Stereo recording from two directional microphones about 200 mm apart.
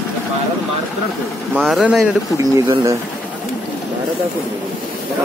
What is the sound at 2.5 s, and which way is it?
Speech, 15° right (ahead or behind).